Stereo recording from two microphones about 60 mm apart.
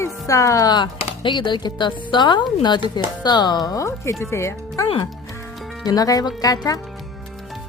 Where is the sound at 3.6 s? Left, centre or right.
Left.